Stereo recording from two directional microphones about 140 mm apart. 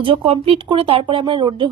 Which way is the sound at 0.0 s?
40° right (ahead or behind).